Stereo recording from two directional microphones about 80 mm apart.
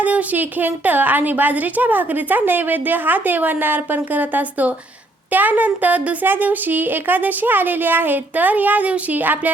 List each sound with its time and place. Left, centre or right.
0.0 s a woman's voice: centre